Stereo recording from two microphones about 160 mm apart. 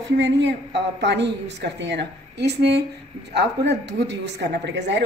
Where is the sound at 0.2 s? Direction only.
90° right.